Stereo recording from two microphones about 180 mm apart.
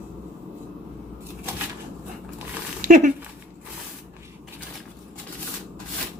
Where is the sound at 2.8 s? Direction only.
45° right (ahead or behind).